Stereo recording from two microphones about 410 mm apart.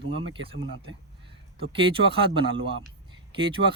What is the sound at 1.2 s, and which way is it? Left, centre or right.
Speech, centre.